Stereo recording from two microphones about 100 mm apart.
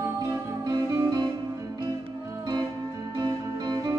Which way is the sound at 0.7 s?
40° right (ahead or behind).